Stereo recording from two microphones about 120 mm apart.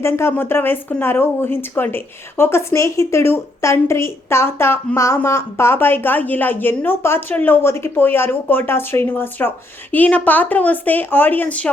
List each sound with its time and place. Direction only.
0.0 s a woman's voice: 20° left (ahead or behind)